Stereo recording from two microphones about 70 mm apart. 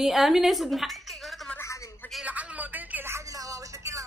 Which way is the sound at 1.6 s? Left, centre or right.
Left.